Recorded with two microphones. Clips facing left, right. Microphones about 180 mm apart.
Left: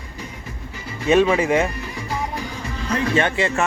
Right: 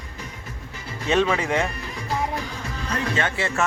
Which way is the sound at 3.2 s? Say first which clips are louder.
Left 5 dB; 15° left (ahead or behind).